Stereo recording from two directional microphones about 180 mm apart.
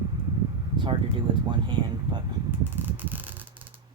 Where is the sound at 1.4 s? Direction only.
25° right (ahead or behind).